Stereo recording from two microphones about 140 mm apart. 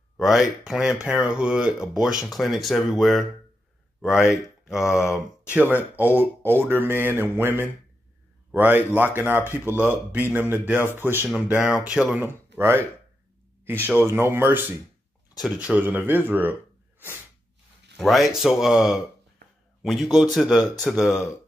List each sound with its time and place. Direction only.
0.2 s speech: centre (ahead or behind)
12.3 s speech: 15° right (ahead or behind)
14.0 s speech: 15° right (ahead or behind)
17.9 s speech: centre (ahead or behind)